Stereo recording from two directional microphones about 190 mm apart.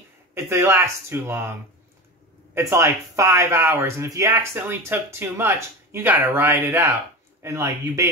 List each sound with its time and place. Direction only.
0.3 s speech: 15° right (ahead or behind)